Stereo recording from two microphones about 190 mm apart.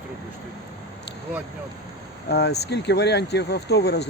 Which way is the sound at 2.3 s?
60° left (ahead or behind).